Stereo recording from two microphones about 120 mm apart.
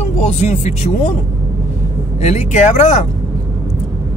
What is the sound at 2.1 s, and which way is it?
Speech, 70° left (ahead or behind).